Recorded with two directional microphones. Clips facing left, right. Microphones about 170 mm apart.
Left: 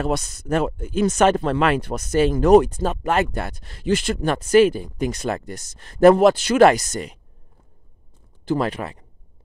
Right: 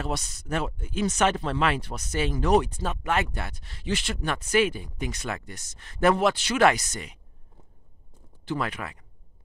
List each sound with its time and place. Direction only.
0.0 s speech: 50° left (ahead or behind)
8.5 s speech: 35° left (ahead or behind)